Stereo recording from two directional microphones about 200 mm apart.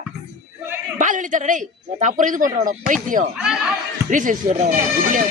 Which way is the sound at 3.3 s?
5° right (ahead or behind).